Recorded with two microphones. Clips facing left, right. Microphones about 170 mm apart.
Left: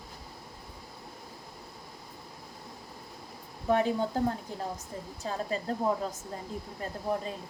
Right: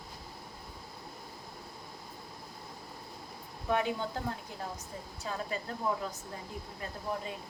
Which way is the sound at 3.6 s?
35° left (ahead or behind).